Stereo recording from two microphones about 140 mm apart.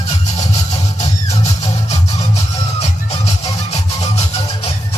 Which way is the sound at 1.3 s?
50° left (ahead or behind).